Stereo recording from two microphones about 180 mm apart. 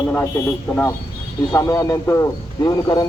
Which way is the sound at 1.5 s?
15° left (ahead or behind).